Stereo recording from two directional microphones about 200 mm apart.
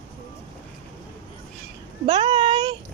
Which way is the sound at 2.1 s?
25° right (ahead or behind).